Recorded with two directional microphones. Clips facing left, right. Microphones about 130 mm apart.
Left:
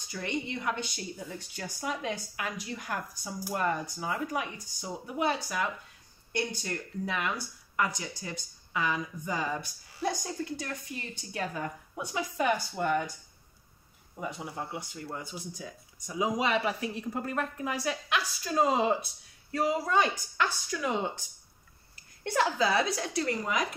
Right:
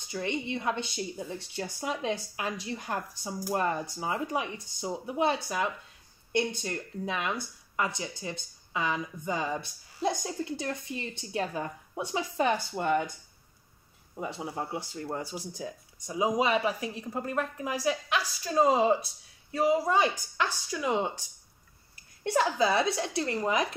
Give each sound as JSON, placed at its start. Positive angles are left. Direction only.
{"t": 0.0, "sound": "a woman's voice", "side_deg": -25}
{"t": 14.2, "sound": "a woman's voice", "side_deg": -30}
{"t": 20.0, "sound": "a woman's voice", "side_deg": -25}
{"t": 22.2, "sound": "a woman's voice", "side_deg": -20}